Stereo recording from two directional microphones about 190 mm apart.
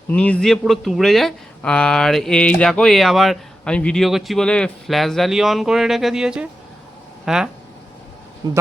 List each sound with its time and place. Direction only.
0.1 s speech: 5° left (ahead or behind)
8.4 s a man's voice: 20° right (ahead or behind)